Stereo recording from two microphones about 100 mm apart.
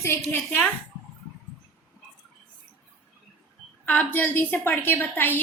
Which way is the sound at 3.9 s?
20° left (ahead or behind).